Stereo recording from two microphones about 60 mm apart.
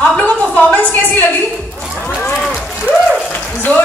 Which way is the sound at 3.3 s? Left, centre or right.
Left.